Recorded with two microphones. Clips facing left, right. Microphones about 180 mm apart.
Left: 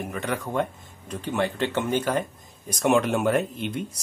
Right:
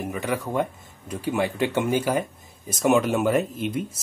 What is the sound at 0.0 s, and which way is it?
Speech, 5° right (ahead or behind).